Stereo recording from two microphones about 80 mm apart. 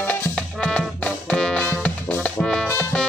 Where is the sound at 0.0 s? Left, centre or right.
Centre.